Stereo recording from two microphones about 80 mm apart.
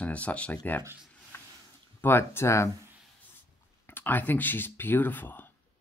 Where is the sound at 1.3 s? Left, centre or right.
Left.